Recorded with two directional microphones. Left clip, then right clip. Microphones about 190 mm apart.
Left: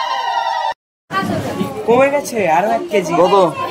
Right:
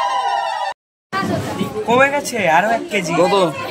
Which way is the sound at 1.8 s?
60° right (ahead or behind).